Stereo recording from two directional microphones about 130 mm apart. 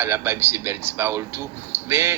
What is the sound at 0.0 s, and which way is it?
Speech, 20° right (ahead or behind).